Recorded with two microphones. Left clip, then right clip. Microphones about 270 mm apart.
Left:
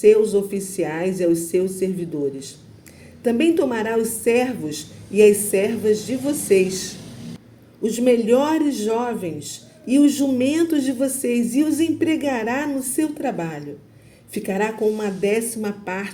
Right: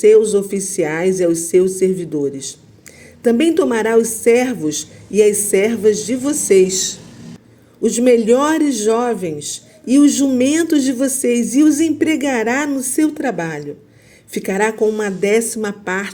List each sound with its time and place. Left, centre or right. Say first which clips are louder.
0.0 s speech: right 4 dB; right
3.2 s speech: right 4 dB; right